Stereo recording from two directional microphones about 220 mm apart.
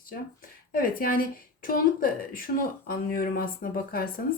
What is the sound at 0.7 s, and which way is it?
Speech, 40° left (ahead or behind).